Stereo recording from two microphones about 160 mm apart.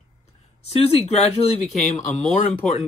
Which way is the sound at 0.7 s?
40° left (ahead or behind).